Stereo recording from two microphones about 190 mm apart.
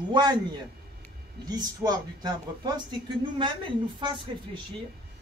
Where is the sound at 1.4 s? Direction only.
20° right (ahead or behind).